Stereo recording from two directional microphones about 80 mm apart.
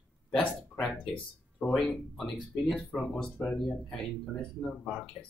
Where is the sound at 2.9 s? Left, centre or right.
Centre.